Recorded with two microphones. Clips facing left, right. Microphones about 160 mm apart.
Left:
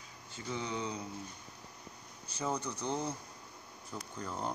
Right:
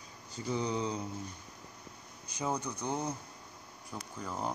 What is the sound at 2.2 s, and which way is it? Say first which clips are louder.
Speech: right 1 dB; 15° right (ahead or behind).